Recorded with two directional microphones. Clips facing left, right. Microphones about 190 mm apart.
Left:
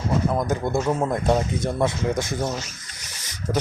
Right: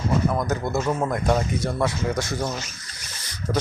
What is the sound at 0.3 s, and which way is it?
Speech, 25° left (ahead or behind).